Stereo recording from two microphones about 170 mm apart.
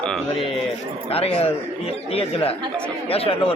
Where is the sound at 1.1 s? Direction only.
35° left (ahead or behind).